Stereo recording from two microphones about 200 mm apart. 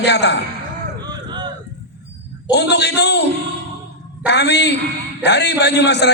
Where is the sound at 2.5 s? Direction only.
55° left (ahead or behind).